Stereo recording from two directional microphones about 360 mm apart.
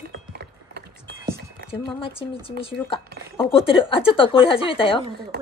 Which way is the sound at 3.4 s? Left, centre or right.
Centre.